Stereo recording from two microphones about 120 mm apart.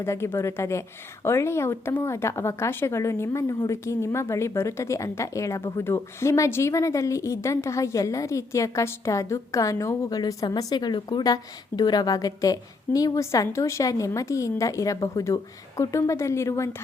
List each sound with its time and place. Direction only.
0.0 s a woman's voice: 20° left (ahead or behind)